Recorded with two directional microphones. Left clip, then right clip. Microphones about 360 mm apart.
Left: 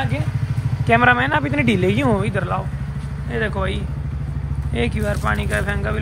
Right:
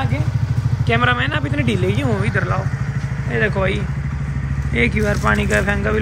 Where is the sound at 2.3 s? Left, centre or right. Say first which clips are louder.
Right 2 dB; centre.